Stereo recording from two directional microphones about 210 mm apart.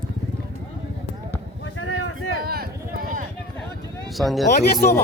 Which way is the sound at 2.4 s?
45° right (ahead or behind).